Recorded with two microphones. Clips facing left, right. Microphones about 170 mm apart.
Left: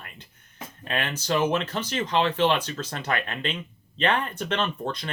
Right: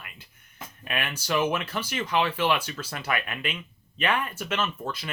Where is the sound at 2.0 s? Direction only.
10° right (ahead or behind).